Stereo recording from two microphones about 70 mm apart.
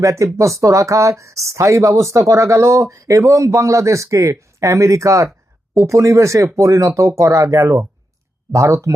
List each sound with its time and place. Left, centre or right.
0.0 s speech: right